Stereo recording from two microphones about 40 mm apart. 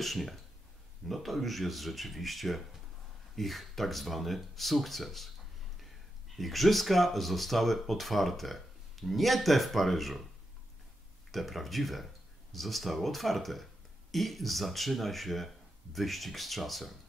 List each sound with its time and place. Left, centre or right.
0.0 s speech: centre
6.3 s speech: centre
11.3 s speech: centre